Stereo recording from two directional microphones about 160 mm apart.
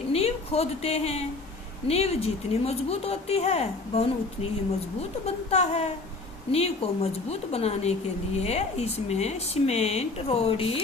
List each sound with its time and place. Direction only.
0.1 s a woman's voice: 40° left (ahead or behind)
5.2 s speech: 40° left (ahead or behind)